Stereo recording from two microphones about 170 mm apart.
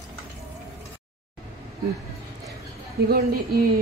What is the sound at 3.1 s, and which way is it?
Speech, 60° right (ahead or behind).